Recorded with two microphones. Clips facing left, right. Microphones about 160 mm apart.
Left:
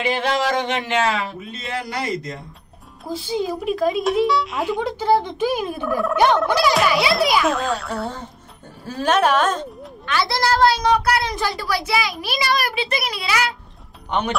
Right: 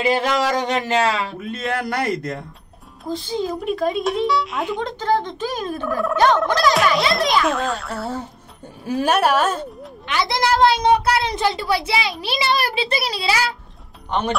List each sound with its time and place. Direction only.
0.0 s a sound: 40° right (ahead or behind)
1.4 s a man's voice: 55° right (ahead or behind)
3.1 s a child's voice: 10° left (ahead or behind); by 9.7 s 10° right (ahead or behind)
10.0 s a woman's voice: 20° right (ahead or behind)